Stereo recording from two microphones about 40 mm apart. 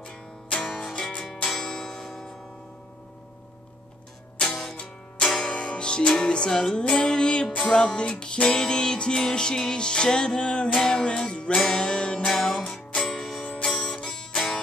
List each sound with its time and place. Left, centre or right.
0.0 s music: centre
1.4 s a sound: centre
4.5 s music: centre
4.7 s music: centre
13.7 s music: centre